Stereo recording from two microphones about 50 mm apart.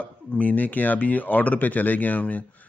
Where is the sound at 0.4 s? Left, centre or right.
Left.